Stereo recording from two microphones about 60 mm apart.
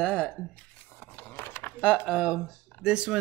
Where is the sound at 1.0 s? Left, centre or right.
Left.